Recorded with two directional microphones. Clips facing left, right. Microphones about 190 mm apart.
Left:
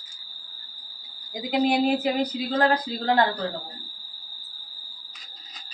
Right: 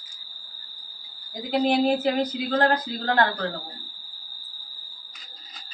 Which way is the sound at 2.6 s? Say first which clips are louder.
Left 3 dB; 15° left (ahead or behind).